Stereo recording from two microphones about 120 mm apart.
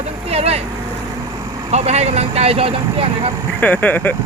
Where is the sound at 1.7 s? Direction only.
65° right (ahead or behind).